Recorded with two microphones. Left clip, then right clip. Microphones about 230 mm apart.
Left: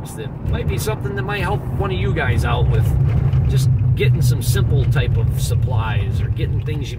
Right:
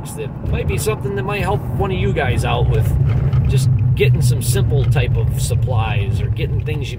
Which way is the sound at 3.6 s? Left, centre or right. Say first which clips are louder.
Right 4 dB; centre.